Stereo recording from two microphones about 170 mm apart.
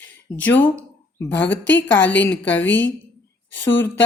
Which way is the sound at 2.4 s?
10° left (ahead or behind).